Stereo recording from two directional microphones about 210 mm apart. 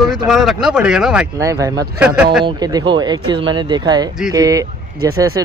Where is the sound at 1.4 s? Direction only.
15° right (ahead or behind).